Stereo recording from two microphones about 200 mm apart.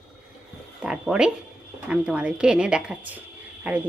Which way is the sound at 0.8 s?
5° right (ahead or behind).